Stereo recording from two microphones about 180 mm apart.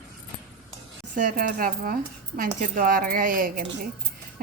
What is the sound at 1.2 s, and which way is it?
A woman's voice, 50° right (ahead or behind).